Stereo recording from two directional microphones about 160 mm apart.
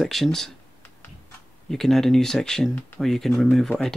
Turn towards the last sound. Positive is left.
turn(degrees=0)  # may be behind; listen again after turning